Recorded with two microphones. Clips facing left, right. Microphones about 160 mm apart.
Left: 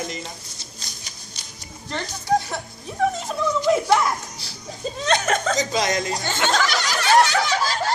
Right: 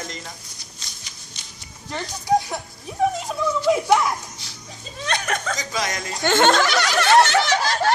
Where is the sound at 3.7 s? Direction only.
10° right (ahead or behind).